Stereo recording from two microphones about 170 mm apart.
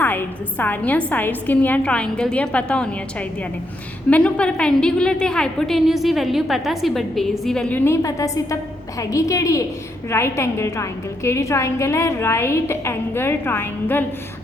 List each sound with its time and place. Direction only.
0.0 s a woman's voice: 10° left (ahead or behind)